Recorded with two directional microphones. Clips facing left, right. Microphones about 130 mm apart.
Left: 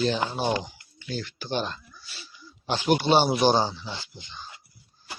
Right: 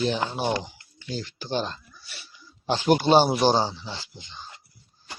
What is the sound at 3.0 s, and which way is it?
Speech, 40° right (ahead or behind).